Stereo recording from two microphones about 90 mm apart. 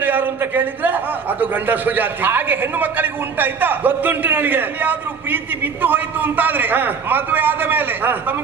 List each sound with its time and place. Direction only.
0.0 s a man's voice: 20° right (ahead or behind)